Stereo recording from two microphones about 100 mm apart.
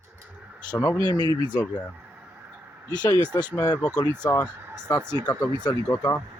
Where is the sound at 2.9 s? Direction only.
45° left (ahead or behind).